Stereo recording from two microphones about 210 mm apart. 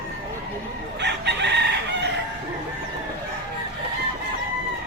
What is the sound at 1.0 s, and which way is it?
Chicken, 55° right (ahead or behind).